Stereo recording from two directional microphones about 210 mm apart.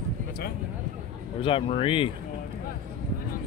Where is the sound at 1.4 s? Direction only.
25° left (ahead or behind).